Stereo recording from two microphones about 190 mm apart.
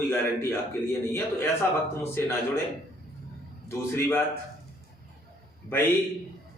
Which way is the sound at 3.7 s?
10° left (ahead or behind).